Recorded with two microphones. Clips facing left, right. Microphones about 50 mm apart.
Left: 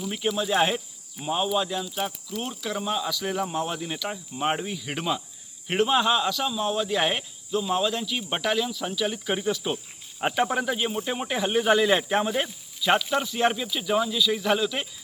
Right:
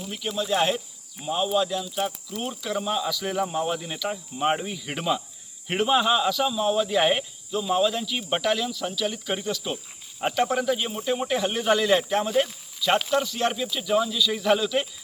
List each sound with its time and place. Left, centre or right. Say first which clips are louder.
0.3 s speech: right 1 dB; centre
10.2 s cricket: even; centre
10.5 s speech: right 1 dB; centre